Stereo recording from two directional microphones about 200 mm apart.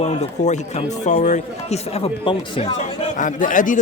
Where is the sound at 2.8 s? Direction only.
40° left (ahead or behind).